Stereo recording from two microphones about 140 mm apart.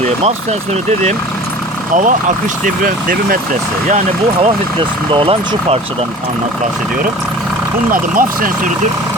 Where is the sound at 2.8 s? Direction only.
90° right.